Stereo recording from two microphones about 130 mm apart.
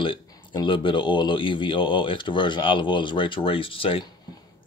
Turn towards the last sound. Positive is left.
turn(degrees=45)  # may be behind; listen again after turning